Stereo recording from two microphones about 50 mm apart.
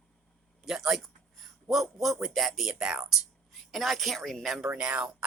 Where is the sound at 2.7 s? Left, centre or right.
Centre.